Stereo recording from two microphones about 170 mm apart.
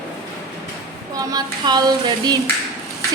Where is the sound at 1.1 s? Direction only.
20° right (ahead or behind).